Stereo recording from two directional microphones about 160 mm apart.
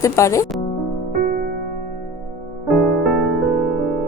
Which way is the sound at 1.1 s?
70° right (ahead or behind).